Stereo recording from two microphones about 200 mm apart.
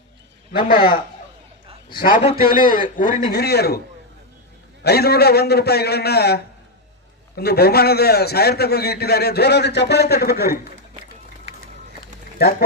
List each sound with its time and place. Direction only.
2.0 s a man's voice: 45° left (ahead or behind)
4.8 s a man's voice: 50° left (ahead or behind)
12.4 s speech: 50° left (ahead or behind)